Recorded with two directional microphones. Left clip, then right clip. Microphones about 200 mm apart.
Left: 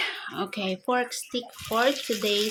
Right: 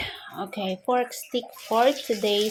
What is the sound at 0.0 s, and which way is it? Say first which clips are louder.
Speech: left 3 dB; 10° left (ahead or behind).